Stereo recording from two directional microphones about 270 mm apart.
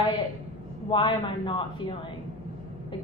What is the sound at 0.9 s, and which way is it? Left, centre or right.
Speech, centre.